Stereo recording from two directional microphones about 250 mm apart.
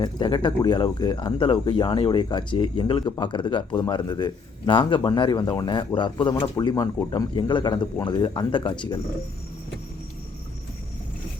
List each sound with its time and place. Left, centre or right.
0.0 s speech: centre